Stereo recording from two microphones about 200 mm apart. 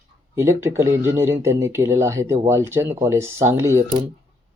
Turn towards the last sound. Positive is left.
turn(degrees=-15)  # may be behind; listen again after turning